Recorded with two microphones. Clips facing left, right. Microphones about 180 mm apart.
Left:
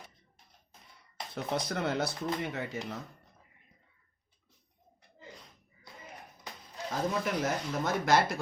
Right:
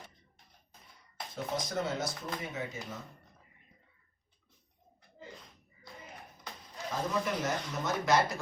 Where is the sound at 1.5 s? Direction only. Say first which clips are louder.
Left 3 dB; 65° left (ahead or behind).